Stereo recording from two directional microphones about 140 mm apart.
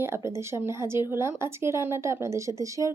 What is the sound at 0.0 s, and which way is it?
A woman's voice, 20° right (ahead or behind).